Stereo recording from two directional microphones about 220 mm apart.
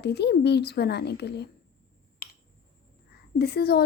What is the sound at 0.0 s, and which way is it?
Speech, 50° left (ahead or behind).